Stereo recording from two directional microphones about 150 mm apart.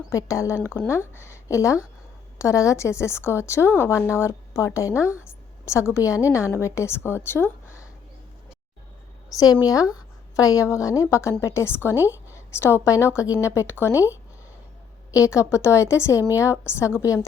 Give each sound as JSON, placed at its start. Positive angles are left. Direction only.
{"t": 0.1, "sound": "a woman's voice", "side_deg": 20}
{"t": 9.3, "sound": "a woman's voice", "side_deg": 25}
{"t": 15.1, "sound": "a woman's voice", "side_deg": 20}